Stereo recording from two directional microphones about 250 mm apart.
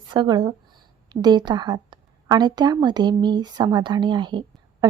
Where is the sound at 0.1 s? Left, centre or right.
Centre.